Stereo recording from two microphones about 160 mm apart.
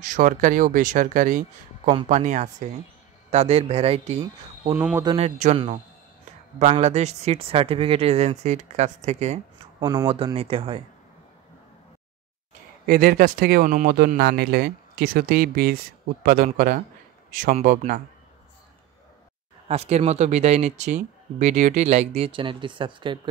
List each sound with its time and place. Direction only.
0.1 s speech: 55° right (ahead or behind); by 4.2 s 40° right (ahead or behind)
4.9 s a man's voice: 25° right (ahead or behind)
5.2 s speech: 45° right (ahead or behind)
6.7 s speech: 40° right (ahead or behind)
9.8 s speech: 25° right (ahead or behind)
10.0 s speech: 35° right (ahead or behind)
12.8 s speech: 65° right (ahead or behind)
19.7 s speech: 40° right (ahead or behind)